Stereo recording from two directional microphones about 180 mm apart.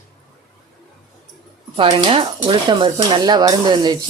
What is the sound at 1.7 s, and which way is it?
Speech, 30° right (ahead or behind).